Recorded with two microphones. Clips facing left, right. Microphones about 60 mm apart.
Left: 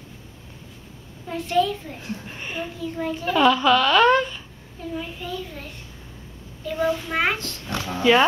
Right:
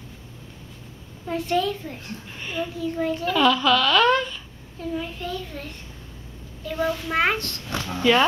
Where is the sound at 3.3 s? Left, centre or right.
Centre.